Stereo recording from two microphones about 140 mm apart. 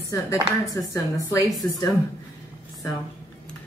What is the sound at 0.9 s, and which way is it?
Speech, 25° left (ahead or behind).